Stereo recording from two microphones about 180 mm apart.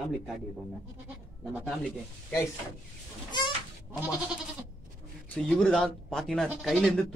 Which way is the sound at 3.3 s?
25° left (ahead or behind).